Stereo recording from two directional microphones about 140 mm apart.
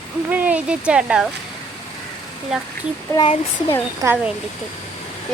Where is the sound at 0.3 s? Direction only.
10° right (ahead or behind).